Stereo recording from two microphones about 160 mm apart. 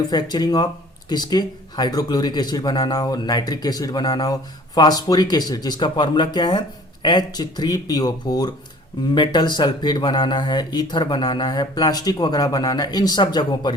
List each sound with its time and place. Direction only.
0.1 s speech: 25° left (ahead or behind)